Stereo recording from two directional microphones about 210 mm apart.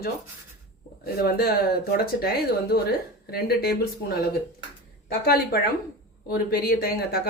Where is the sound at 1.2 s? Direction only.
45° left (ahead or behind).